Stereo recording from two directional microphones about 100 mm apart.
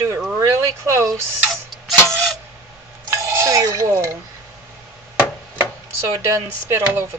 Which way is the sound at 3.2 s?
35° right (ahead or behind).